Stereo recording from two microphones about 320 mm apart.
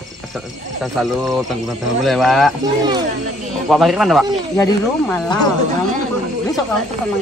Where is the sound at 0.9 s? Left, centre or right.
Centre.